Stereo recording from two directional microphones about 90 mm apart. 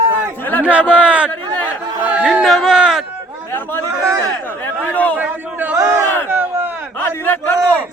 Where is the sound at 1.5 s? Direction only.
50° right (ahead or behind).